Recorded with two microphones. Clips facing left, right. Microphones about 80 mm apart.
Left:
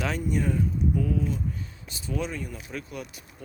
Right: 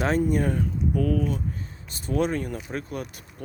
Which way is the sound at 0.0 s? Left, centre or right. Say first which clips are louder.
Right 5 dB; right.